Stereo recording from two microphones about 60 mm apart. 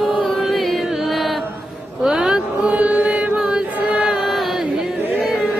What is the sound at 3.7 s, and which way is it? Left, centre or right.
Chant, right.